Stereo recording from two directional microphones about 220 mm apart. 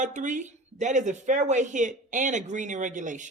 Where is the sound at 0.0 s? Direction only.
35° right (ahead or behind).